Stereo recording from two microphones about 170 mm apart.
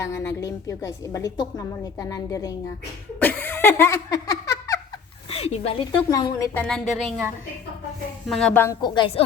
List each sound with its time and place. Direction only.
0.0 s a woman's voice: 20° left (ahead or behind)
3.2 s giggle: 10° left (ahead or behind)
5.3 s speech: 35° left (ahead or behind)
6.1 s a woman's voice: 20° left (ahead or behind)
6.5 s speech: 5° left (ahead or behind)
8.3 s speech: 5° left (ahead or behind)
8.6 s a woman's voice: 20° left (ahead or behind)